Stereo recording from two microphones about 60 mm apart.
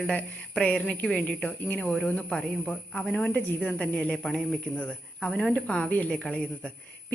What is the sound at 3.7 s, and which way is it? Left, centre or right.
Speech, centre.